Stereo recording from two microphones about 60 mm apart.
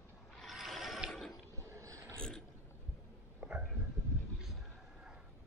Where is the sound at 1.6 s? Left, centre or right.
Right.